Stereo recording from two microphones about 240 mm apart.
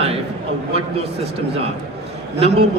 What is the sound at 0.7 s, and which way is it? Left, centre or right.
A man's voice, right.